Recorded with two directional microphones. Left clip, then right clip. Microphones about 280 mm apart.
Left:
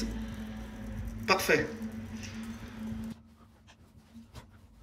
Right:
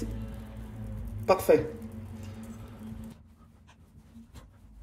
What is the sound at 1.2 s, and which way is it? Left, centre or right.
Speech, centre.